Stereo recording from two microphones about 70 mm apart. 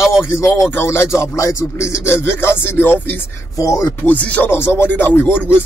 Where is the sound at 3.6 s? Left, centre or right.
Left.